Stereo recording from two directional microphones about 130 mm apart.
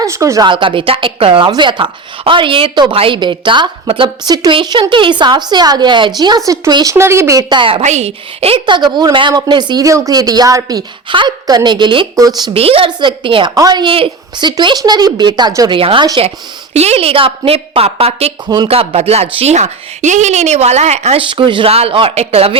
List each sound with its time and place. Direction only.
0.0 s speech: 25° right (ahead or behind)
0.4 s a woman's voice: 40° right (ahead or behind); by 7.4 s 20° right (ahead or behind)
7.5 s a woman's voice: 40° right (ahead or behind)
7.8 s a woman's voice: 60° right (ahead or behind); by 13.5 s 40° right (ahead or behind)
13.5 s a woman's voice: 30° right (ahead or behind)
14.5 s a woman's voice: 30° right (ahead or behind)
15.8 s a woman's voice: 45° right (ahead or behind)
18.4 s a woman's voice: 35° right (ahead or behind)
18.7 s speech: 50° right (ahead or behind)
21.2 s a woman's voice: 40° right (ahead or behind)